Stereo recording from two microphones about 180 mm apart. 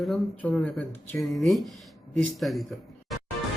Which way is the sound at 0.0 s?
5° left (ahead or behind).